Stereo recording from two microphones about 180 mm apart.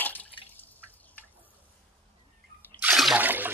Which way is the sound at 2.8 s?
5° right (ahead or behind).